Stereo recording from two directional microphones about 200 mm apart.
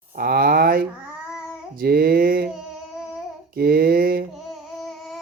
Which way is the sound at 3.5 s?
50° right (ahead or behind).